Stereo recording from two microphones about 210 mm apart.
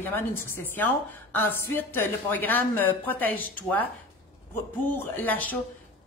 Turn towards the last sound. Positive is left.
turn(degrees=10)  # may be behind; listen again after turning